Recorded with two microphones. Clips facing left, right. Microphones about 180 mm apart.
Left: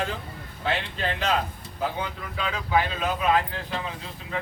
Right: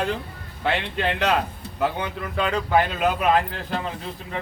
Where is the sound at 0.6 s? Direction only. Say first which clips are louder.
Right 4 dB; 70° right (ahead or behind).